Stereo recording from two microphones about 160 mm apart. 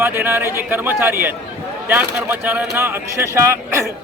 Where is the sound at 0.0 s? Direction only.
15° right (ahead or behind).